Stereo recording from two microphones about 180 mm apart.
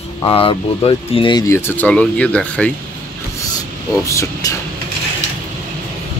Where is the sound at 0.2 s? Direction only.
30° left (ahead or behind); by 2.7 s 5° left (ahead or behind).